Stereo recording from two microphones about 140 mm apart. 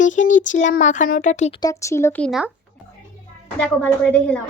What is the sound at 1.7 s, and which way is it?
Speech, 20° left (ahead or behind).